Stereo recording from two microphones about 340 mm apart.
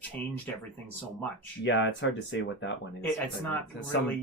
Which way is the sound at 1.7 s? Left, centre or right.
Left.